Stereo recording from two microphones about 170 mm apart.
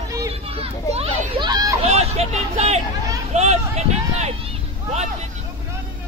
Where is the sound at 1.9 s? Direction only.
40° right (ahead or behind).